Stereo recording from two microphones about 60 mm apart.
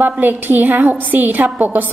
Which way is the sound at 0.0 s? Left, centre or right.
Right.